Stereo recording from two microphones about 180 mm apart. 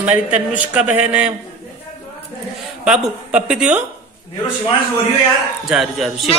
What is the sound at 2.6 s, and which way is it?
Speech, 5° right (ahead or behind).